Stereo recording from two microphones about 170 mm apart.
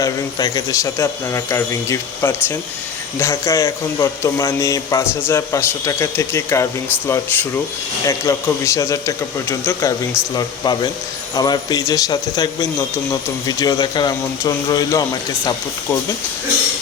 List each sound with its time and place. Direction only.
0.0 s a man's voice: 20° left (ahead or behind)